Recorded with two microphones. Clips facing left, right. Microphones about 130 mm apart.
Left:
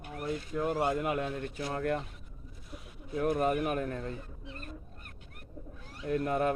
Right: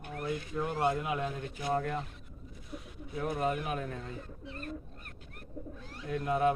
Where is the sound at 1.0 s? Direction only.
55° left (ahead or behind).